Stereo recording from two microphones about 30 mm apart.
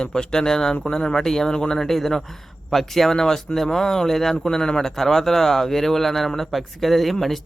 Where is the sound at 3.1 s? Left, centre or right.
Centre.